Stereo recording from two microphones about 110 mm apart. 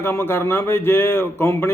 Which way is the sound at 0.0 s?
20° left (ahead or behind).